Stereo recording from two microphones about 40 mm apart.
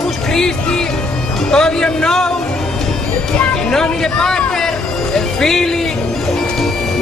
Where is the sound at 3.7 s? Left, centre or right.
Centre.